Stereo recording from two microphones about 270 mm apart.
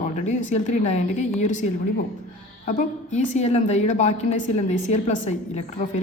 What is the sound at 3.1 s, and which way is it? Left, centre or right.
A woman's voice, left.